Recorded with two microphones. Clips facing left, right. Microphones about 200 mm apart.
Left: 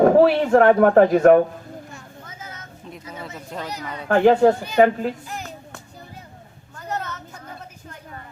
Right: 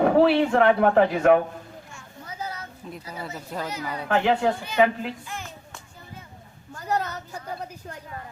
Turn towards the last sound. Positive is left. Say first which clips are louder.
# right 3 dB
turn(degrees=-35)  # may be behind; listen again after turning